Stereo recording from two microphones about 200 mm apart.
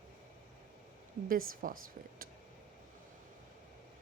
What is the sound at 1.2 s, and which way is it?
Speech, 45° right (ahead or behind).